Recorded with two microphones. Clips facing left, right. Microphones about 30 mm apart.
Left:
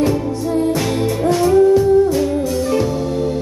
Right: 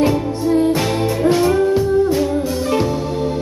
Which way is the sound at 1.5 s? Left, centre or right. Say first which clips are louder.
Left 4 dB; right.